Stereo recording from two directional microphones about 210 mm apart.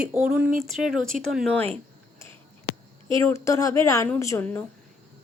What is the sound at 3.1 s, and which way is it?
A woman's voice, 15° left (ahead or behind).